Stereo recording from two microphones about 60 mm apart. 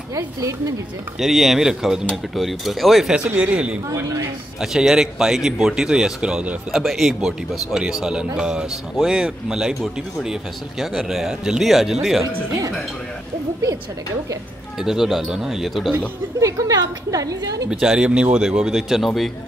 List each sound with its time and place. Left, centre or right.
0.1 s a woman's voice: right
1.2 s speech: centre
3.3 s speech: centre
4.6 s speech: centre
6.7 s speech: centre
10.8 s speech: centre
14.8 s speech: centre
16.3 s a woman's voice: right
17.6 s speech: centre